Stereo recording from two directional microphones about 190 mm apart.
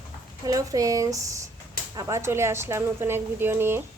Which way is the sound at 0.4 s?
20° right (ahead or behind).